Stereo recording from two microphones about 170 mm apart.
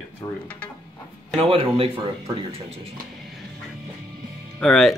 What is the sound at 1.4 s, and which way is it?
Speech, 35° right (ahead or behind).